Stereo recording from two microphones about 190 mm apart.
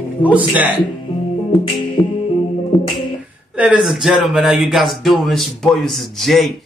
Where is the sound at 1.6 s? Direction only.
25° left (ahead or behind).